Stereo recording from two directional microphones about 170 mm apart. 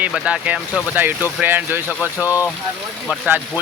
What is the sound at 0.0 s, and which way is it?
Speech, 5° right (ahead or behind).